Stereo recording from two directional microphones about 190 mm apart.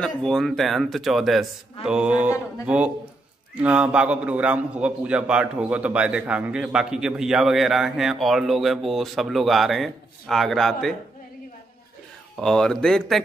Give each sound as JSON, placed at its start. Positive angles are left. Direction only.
{"t": 0.0, "sound": "a man's voice", "side_deg": 0}
{"t": 12.4, "sound": "a man's voice", "side_deg": 5}